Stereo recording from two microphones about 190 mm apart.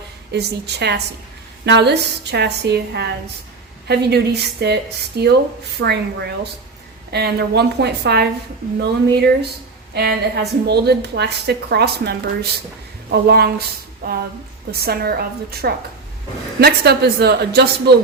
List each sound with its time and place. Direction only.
0.3 s a woman's voice: 60° right (ahead or behind)
14.0 s a sound: 50° right (ahead or behind)
14.8 s a woman's voice: 55° right (ahead or behind)